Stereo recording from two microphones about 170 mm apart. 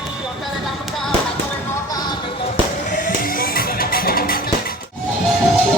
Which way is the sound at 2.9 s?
50° left (ahead or behind).